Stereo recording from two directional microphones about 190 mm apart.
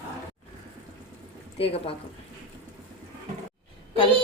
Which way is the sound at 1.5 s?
30° left (ahead or behind).